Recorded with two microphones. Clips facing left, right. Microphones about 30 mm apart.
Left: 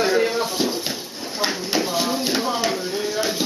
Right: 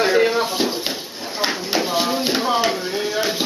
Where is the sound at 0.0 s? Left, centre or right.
Centre.